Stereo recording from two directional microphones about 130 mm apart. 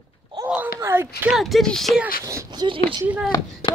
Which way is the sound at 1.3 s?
Centre (ahead or behind).